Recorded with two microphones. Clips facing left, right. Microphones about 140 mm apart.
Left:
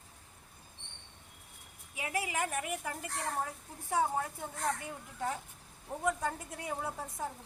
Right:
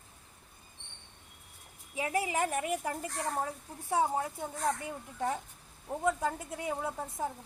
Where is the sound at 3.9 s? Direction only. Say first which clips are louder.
Right 2 dB; 15° right (ahead or behind).